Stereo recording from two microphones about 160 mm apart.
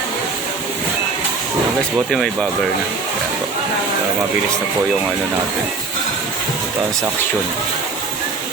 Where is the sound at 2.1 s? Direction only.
Centre (ahead or behind).